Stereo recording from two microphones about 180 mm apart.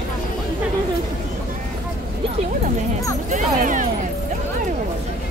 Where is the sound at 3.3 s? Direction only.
45° right (ahead or behind).